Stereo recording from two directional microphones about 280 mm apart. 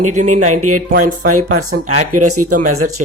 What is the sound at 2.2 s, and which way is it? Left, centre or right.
Speech, right.